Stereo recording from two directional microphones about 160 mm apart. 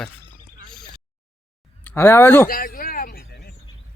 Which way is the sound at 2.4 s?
65° left (ahead or behind).